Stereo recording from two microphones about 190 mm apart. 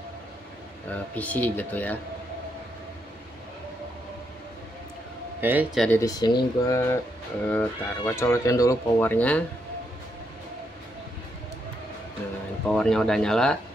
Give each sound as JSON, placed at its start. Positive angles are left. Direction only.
{"t": 0.9, "sound": "speech", "side_deg": 10}
{"t": 5.4, "sound": "a man's voice", "side_deg": -10}
{"t": 5.9, "sound": "speech", "side_deg": 20}
{"t": 12.6, "sound": "speech", "side_deg": 5}